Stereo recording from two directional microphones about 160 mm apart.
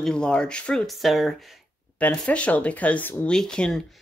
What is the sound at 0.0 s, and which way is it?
Speech, 5° left (ahead or behind).